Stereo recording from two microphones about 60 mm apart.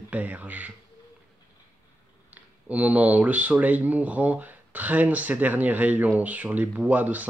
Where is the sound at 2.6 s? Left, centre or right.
Right.